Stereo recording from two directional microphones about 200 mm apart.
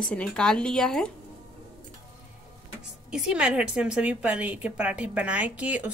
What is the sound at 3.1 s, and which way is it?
A woman's voice, 5° right (ahead or behind).